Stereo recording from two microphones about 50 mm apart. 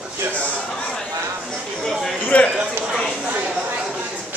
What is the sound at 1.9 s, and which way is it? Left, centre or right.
Speech, centre.